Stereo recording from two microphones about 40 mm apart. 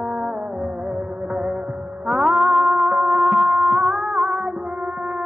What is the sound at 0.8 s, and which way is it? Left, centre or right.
Music of bollywood, right.